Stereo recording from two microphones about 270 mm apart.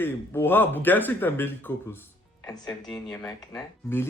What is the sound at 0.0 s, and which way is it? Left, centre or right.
Speech, centre.